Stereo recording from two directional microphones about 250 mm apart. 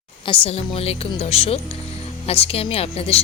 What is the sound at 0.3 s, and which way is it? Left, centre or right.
Speech, left.